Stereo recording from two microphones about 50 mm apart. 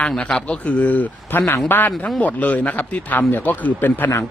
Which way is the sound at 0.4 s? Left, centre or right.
Left.